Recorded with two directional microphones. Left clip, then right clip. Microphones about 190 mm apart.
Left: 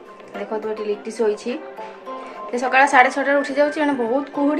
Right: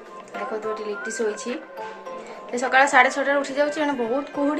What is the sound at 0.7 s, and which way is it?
Speech, 25° left (ahead or behind).